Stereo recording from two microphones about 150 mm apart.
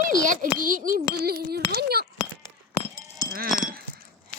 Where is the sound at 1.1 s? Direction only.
90° right.